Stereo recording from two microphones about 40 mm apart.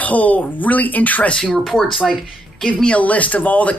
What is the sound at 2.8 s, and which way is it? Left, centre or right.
Speech, left.